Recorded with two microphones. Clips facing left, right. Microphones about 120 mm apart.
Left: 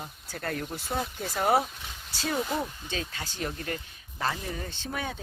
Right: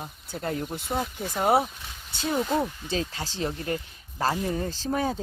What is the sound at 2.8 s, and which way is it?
Speech, 30° right (ahead or behind).